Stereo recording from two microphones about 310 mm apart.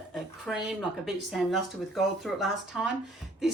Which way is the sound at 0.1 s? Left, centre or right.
Centre.